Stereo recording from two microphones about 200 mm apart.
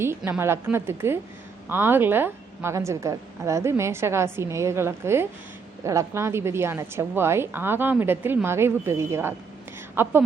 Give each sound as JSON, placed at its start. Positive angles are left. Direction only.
{"t": 0.2, "sound": "a woman's voice", "side_deg": -10}